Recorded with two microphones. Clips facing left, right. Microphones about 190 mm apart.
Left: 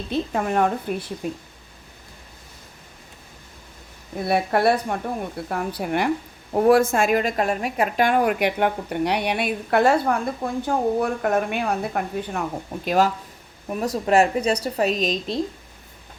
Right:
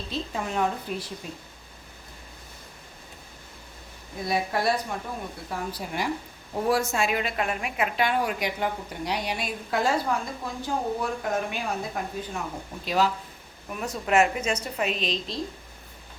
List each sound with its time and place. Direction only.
0.1 s a woman's voice: 55° left (ahead or behind)
4.3 s a woman's voice: 60° left (ahead or behind)
12.8 s speech: 50° left (ahead or behind)
13.7 s a woman's voice: 35° left (ahead or behind)